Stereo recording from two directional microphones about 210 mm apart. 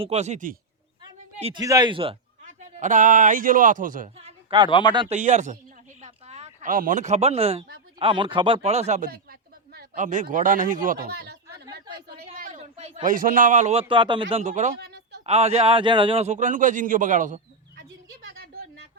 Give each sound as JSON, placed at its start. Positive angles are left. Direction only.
{"t": 0.0, "sound": "a man's voice", "side_deg": -30}
{"t": 1.6, "sound": "speech", "side_deg": -15}
{"t": 2.7, "sound": "a man's voice", "side_deg": -35}
{"t": 4.7, "sound": "speech", "side_deg": 20}
{"t": 4.9, "sound": "a man's voice", "side_deg": -30}
{"t": 6.0, "sound": "a sound", "side_deg": -30}
{"t": 7.9, "sound": "speech", "side_deg": -25}
{"t": 12.3, "sound": "a man's voice", "side_deg": -40}
{"t": 15.3, "sound": "a man's voice", "side_deg": -30}